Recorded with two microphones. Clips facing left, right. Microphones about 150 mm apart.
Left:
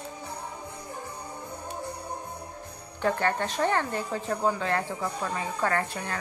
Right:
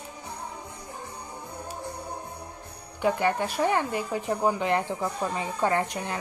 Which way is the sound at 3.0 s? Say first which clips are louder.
Right 2 dB; 10° right (ahead or behind).